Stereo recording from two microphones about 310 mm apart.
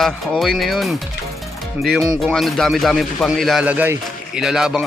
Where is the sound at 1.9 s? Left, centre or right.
Centre.